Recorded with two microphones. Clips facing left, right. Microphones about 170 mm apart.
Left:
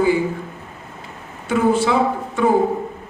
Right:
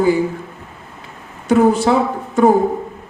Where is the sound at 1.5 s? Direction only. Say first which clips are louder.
Right 4 dB; 40° right (ahead or behind).